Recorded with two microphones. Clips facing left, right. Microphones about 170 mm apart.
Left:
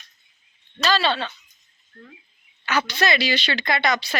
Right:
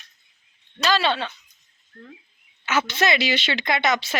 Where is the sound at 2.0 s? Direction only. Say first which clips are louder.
Right 2 dB; 25° left (ahead or behind).